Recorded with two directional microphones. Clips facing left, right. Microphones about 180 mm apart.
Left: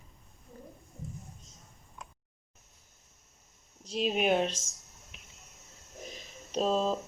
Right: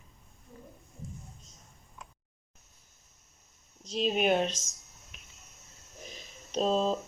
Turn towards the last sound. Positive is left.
turn(degrees=5)  # may be behind; listen again after turning